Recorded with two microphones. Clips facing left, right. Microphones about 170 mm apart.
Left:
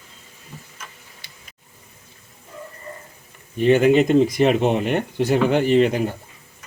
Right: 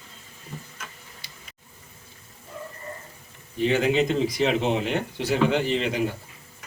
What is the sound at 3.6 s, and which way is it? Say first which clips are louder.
Speech: left 7 dB; 55° left (ahead or behind).